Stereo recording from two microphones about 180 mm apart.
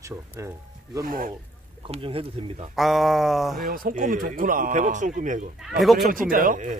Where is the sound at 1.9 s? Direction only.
30° right (ahead or behind).